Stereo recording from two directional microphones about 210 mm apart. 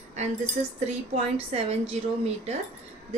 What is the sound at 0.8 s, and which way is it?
Speech, 30° right (ahead or behind).